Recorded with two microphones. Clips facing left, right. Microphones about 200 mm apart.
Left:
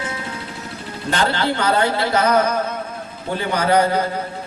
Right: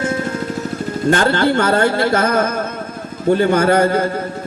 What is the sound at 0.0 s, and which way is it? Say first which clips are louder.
Music: right 9 dB; 50° right (ahead or behind).